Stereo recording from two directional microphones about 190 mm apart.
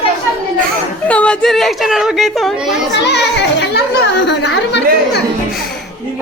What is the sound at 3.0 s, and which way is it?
A child's voice, 65° left (ahead or behind).